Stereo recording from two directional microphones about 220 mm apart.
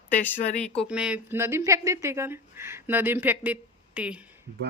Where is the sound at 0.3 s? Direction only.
35° left (ahead or behind).